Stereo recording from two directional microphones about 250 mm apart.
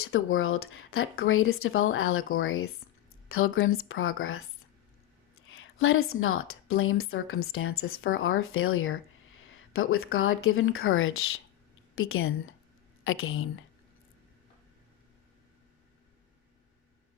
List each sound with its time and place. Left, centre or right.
0.0 s a woman's voice: left
5.5 s a woman's voice: left